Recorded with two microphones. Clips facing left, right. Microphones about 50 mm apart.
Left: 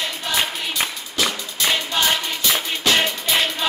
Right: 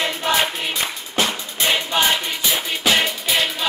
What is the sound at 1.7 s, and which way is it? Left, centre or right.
Music, centre.